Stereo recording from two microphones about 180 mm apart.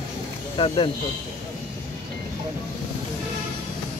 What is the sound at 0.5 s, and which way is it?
Speech, 30° left (ahead or behind).